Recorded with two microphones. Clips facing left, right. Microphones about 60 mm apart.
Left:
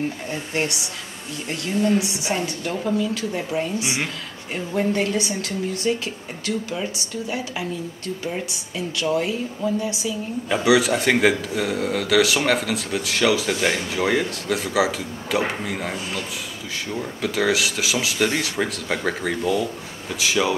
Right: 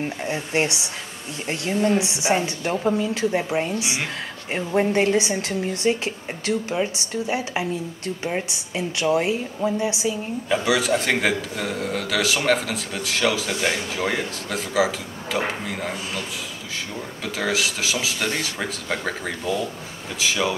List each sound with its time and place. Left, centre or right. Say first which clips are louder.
0.3 s a woman's voice: right 2 dB; right
8.7 s a woman's voice: right 2 dB; right
10.5 s a man's voice: left 3 dB; centre
17.2 s a man's voice: left 3 dB; centre